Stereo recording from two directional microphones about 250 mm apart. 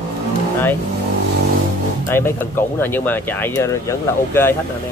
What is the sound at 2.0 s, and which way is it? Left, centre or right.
Speech, centre.